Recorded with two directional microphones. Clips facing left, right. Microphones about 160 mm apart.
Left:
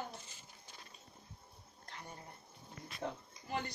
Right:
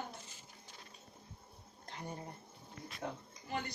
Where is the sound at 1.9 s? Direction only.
25° right (ahead or behind).